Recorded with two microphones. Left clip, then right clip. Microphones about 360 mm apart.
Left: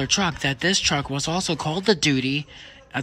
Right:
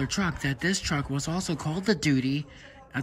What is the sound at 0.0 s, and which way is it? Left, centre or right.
Speech, centre.